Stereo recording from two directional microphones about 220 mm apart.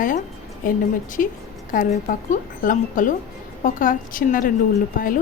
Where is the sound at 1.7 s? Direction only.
40° left (ahead or behind).